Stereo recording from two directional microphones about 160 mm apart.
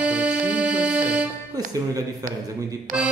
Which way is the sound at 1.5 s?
20° right (ahead or behind).